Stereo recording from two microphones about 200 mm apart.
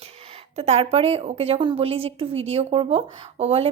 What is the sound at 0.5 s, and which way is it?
A woman's voice, 30° right (ahead or behind).